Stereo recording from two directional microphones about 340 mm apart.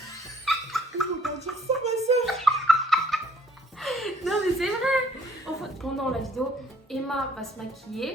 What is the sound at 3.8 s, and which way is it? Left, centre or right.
A woman's voice, centre.